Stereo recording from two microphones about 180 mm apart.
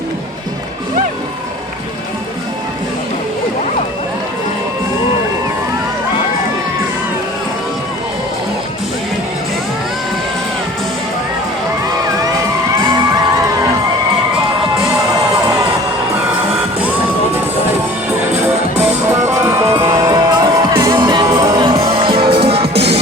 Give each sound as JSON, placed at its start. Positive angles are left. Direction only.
{"t": 18.4, "sound": "music", "side_deg": -10}